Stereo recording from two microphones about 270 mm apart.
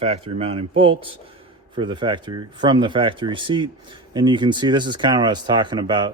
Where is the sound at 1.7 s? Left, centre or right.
Centre.